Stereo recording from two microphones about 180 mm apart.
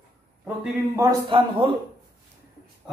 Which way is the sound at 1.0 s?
20° right (ahead or behind).